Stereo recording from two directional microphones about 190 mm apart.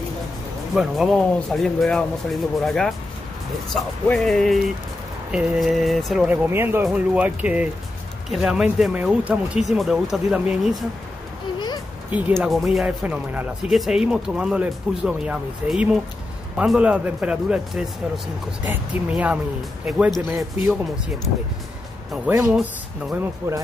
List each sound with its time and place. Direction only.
0.7 s speech: centre (ahead or behind)
12.1 s speech: 10° right (ahead or behind)
22.3 s speech: 15° right (ahead or behind)